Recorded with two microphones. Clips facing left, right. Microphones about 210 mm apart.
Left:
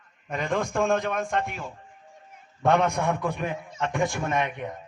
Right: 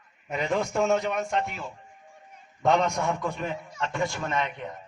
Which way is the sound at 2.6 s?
55° left (ahead or behind).